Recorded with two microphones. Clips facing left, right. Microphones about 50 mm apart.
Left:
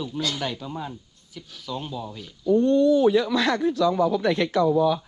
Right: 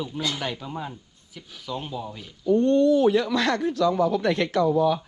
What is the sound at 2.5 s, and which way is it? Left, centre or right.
Speech, right.